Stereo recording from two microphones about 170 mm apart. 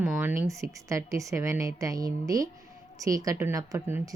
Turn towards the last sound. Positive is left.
turn(degrees=-15)  # may be behind; listen again after turning